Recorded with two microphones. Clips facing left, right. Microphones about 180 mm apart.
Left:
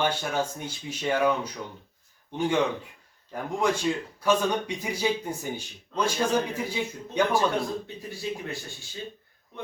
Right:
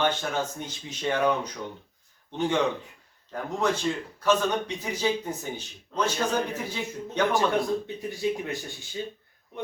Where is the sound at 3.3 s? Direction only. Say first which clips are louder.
Left 1 dB; 10° left (ahead or behind).